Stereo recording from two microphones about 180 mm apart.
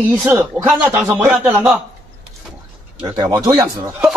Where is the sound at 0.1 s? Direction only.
5° right (ahead or behind).